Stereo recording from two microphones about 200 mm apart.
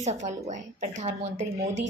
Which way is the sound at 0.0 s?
35° right (ahead or behind).